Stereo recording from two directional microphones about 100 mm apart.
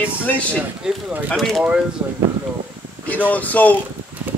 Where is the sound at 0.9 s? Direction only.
10° right (ahead or behind).